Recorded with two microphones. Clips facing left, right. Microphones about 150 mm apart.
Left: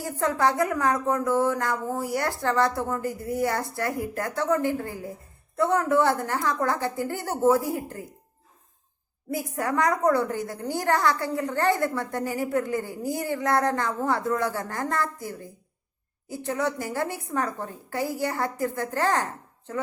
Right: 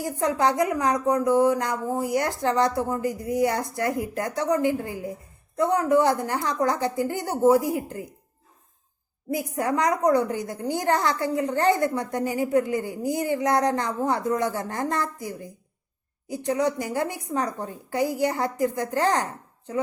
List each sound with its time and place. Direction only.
0.0 s a woman's voice: 15° right (ahead or behind)
9.3 s a woman's voice: 20° right (ahead or behind)